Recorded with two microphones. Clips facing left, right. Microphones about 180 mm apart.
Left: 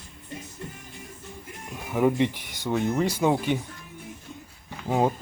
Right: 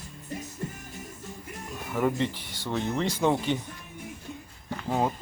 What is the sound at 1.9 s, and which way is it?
Speech, 10° left (ahead or behind).